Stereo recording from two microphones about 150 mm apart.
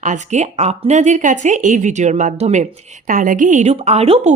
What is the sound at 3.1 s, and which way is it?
A woman's voice, 65° right (ahead or behind).